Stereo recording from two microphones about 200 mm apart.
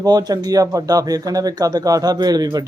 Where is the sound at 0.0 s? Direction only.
20° right (ahead or behind).